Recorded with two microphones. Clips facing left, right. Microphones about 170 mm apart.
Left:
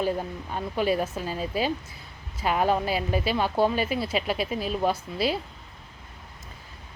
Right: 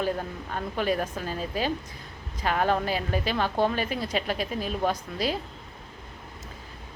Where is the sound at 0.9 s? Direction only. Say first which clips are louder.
Left 2 dB; 10° left (ahead or behind).